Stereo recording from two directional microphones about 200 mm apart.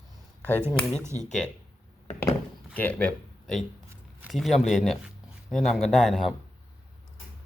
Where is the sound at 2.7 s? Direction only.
5° left (ahead or behind).